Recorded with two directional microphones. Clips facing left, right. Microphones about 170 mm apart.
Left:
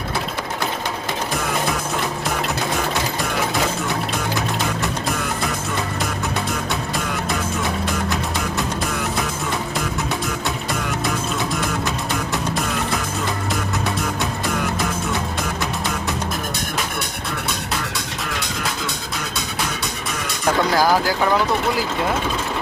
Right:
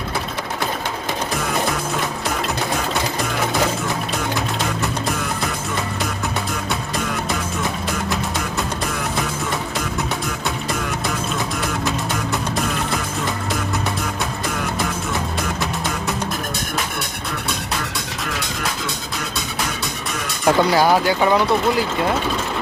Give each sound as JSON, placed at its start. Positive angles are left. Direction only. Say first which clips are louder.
{"t": 20.4, "sound": "speech", "louder": "right 3 dB", "side_deg": 0}